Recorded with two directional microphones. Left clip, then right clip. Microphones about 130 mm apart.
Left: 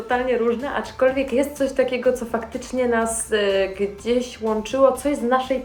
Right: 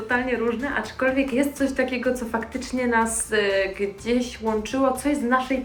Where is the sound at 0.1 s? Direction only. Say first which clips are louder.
Left 4 dB; 30° left (ahead or behind).